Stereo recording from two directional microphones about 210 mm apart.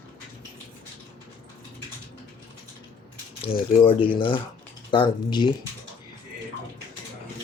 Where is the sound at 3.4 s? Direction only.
25° left (ahead or behind).